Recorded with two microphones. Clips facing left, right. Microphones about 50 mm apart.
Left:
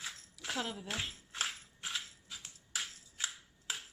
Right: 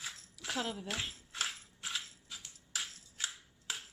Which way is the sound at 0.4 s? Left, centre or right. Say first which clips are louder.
Right 1 dB; centre.